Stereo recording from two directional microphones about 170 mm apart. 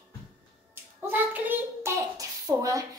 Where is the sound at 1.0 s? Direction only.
10° right (ahead or behind).